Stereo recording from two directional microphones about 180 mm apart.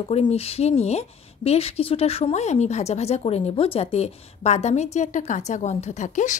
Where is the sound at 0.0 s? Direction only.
35° left (ahead or behind).